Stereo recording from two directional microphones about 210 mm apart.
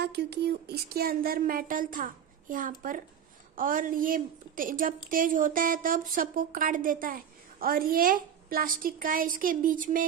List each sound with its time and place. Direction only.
0.0 s a woman's voice: 50° right (ahead or behind)